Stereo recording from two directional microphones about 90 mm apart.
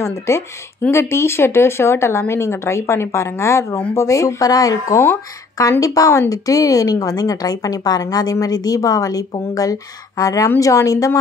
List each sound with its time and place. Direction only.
0.3 s a woman's voice: 30° left (ahead or behind)